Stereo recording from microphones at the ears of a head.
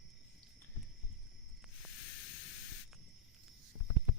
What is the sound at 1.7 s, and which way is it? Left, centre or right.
Hiss, left.